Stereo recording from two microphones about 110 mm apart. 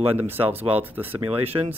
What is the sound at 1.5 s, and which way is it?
Speech, 30° right (ahead or behind).